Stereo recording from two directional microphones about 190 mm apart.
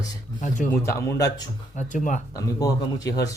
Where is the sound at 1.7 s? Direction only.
40° left (ahead or behind).